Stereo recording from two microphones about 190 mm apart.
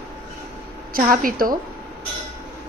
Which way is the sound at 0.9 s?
45° right (ahead or behind).